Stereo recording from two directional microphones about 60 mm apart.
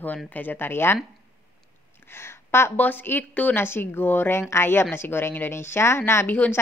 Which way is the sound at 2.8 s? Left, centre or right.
Left.